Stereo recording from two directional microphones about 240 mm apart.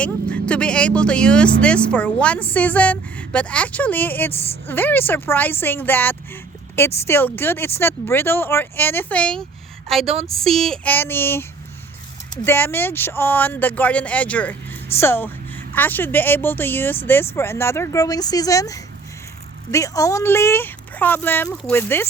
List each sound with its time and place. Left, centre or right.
0.0 s speech: centre
10.4 s speech: centre
12.5 s speech: centre